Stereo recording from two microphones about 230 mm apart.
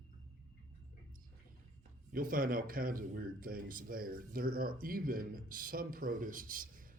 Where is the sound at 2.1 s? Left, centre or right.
Right.